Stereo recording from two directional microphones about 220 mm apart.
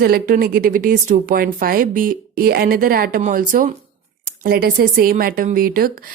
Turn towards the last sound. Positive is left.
turn(degrees=-40)  # may be behind; listen again after turning